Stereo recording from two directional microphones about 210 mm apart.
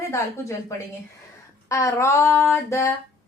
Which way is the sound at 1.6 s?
15° left (ahead or behind).